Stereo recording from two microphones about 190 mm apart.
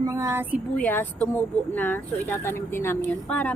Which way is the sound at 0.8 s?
10° left (ahead or behind).